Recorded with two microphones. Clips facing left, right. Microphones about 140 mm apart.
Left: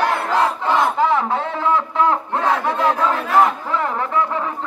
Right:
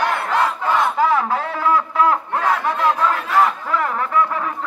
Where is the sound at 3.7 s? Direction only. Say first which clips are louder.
Even; 25° left (ahead or behind).